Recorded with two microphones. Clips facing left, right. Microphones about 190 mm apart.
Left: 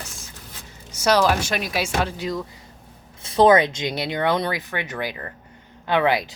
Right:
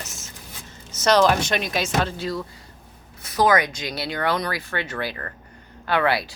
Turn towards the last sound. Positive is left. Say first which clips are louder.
# left 2 dB
turn(degrees=20)  # may be behind; listen again after turning